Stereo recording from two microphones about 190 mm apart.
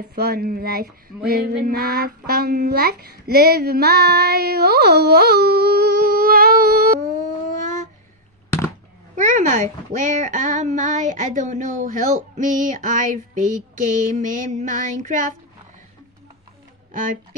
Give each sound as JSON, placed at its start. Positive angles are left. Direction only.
{"t": 0.1, "sound": "female singing", "side_deg": -55}
{"t": 7.6, "sound": "a sound", "side_deg": -40}
{"t": 9.1, "sound": "speech", "side_deg": -40}